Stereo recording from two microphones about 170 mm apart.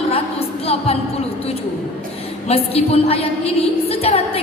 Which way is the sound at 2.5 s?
35° left (ahead or behind).